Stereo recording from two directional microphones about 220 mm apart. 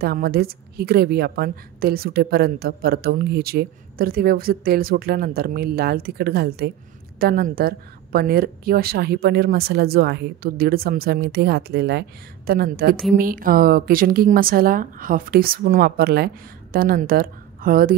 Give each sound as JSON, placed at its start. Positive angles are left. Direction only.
{"t": 0.0, "sound": "a woman's voice", "side_deg": -45}